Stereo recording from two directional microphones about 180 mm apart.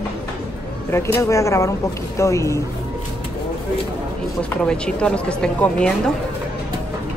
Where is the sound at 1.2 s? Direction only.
15° left (ahead or behind).